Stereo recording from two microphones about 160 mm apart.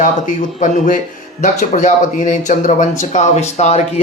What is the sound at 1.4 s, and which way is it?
A man's voice, 50° left (ahead or behind).